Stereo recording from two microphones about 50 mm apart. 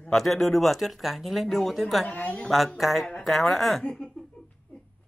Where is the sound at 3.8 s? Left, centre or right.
Centre.